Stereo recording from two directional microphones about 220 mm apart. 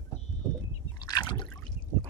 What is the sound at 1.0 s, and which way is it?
Liquid, 15° left (ahead or behind).